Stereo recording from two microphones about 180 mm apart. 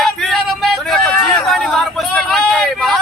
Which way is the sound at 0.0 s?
Centre (ahead or behind).